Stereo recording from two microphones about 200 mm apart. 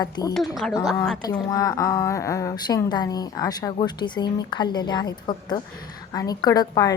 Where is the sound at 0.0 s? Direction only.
20° left (ahead or behind).